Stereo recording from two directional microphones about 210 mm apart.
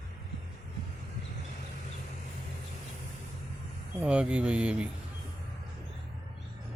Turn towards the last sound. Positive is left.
turn(degrees=-5)  # may be behind; listen again after turning